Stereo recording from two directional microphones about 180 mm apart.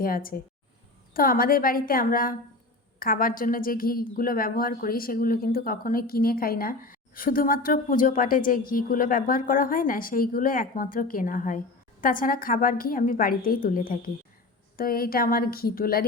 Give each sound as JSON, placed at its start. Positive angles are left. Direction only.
{"t": 0.0, "sound": "a woman's voice", "side_deg": 50}